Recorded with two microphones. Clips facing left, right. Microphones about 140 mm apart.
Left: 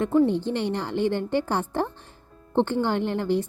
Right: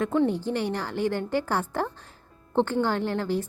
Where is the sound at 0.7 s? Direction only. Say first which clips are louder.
Left 2 dB; 20° left (ahead or behind).